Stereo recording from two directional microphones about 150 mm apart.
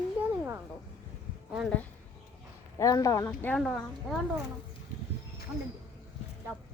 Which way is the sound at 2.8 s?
20° left (ahead or behind).